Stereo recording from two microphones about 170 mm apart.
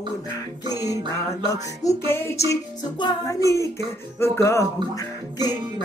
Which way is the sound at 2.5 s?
25° left (ahead or behind).